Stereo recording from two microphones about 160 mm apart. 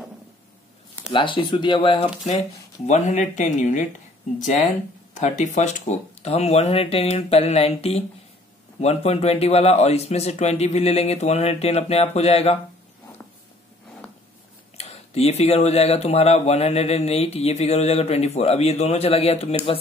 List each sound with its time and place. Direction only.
1.1 s speech: 30° left (ahead or behind)
2.9 s speech: 45° left (ahead or behind)
5.1 s speech: 50° left (ahead or behind)
14.8 s speech: 40° left (ahead or behind)